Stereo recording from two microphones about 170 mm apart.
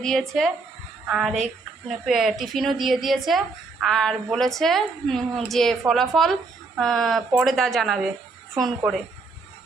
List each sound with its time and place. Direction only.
0.0 s a woman's voice: centre (ahead or behind)